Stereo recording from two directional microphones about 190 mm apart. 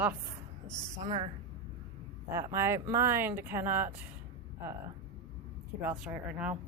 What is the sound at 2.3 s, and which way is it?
Speech, 15° right (ahead or behind).